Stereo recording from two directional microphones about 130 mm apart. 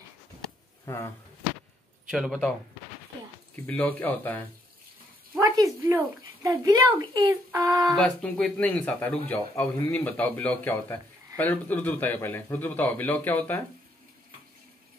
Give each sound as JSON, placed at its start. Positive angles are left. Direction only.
{"t": 0.8, "sound": "speech", "side_deg": 25}
{"t": 2.0, "sound": "a man's voice", "side_deg": -5}
{"t": 3.5, "sound": "a man's voice", "side_deg": 15}
{"t": 5.6, "sound": "speech", "side_deg": -20}
{"t": 7.8, "sound": "a man's voice", "side_deg": 0}